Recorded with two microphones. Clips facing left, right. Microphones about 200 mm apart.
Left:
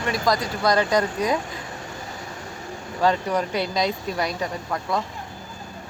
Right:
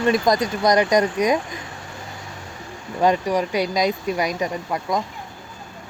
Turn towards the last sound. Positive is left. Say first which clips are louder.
# right 2 dB
turn(degrees=-15)  # may be behind; listen again after turning